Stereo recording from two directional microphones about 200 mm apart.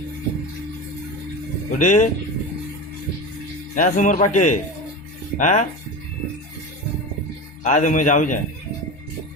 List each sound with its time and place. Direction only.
1.8 s speech: 40° left (ahead or behind)
3.8 s speech: 40° left (ahead or behind)
7.6 s speech: 40° left (ahead or behind)